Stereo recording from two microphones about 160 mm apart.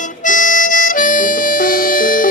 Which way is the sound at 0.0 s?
55° left (ahead or behind).